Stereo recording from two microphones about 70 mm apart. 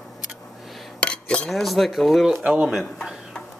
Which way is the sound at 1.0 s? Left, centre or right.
Centre.